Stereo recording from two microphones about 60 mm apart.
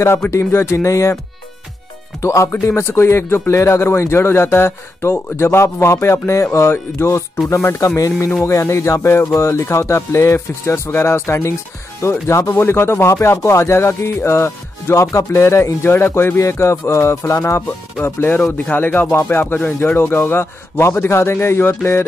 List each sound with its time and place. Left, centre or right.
0.3 s speech: left
2.2 s speech: left
7.8 s speech: left
13.1 s speech: left
18.0 s speech: left